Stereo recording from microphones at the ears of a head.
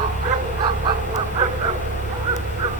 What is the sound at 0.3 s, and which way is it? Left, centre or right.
Goose, right.